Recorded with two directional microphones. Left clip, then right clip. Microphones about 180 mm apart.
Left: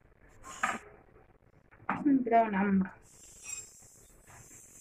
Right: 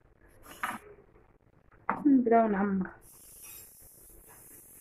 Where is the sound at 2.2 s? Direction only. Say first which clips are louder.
Right 2 dB; 30° right (ahead or behind).